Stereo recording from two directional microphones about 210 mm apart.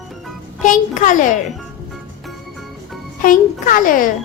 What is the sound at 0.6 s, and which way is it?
Speech, 40° left (ahead or behind).